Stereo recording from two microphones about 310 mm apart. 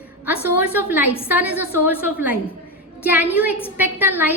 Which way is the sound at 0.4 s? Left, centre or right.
Centre.